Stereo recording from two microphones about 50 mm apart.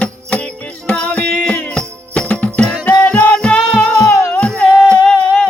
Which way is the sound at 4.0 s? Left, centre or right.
Left.